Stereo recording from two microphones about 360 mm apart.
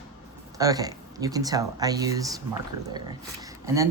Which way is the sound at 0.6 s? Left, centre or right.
Centre.